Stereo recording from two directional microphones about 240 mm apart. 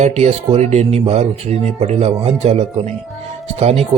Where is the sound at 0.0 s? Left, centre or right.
Right.